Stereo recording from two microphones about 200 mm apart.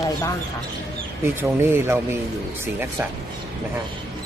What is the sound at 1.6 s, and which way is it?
Speech, 10° right (ahead or behind).